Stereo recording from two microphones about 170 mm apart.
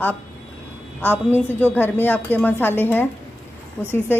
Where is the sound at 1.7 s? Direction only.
10° left (ahead or behind).